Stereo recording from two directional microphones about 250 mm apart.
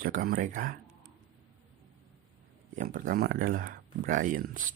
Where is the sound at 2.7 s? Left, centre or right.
Right.